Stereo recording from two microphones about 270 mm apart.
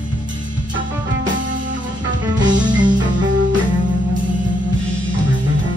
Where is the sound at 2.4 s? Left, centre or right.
Centre.